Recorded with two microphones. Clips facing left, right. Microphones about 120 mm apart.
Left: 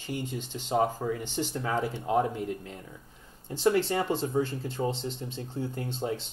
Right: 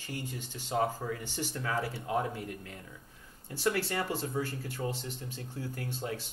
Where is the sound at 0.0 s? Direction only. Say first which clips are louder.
Left 6 dB; 20° left (ahead or behind).